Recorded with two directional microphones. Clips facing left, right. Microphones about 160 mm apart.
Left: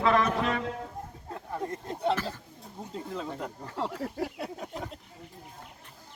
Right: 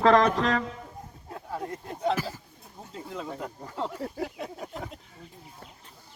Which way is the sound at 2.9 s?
5° right (ahead or behind).